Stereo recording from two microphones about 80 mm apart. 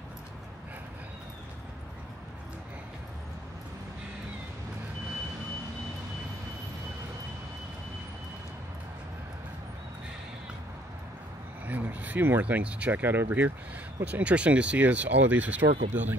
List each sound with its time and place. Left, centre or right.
11.6 s speech: right